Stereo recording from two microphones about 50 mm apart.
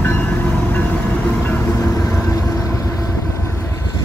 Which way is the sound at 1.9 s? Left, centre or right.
Left.